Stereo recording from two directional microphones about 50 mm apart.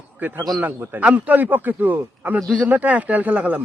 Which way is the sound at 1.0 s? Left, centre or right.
Right.